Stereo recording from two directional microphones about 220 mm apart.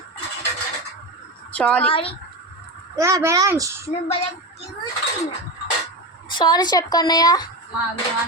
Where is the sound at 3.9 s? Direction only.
30° left (ahead or behind).